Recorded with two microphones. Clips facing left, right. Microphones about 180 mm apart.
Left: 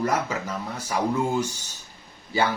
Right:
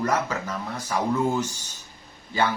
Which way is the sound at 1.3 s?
10° left (ahead or behind).